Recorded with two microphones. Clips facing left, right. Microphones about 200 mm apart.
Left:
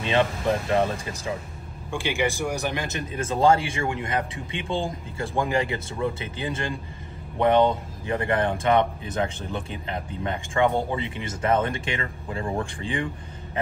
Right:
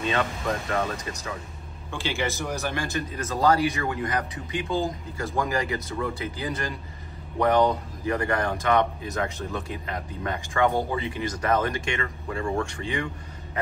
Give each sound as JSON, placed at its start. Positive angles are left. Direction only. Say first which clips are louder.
{"t": 0.1, "sound": "a man's voice", "louder": "left 8 dB", "side_deg": 30}
{"t": 1.9, "sound": "a man's voice", "louder": "left 3 dB", "side_deg": 15}